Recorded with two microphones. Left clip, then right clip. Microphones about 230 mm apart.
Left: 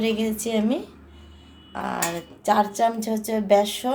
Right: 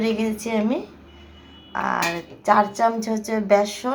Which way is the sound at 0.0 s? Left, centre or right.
Centre.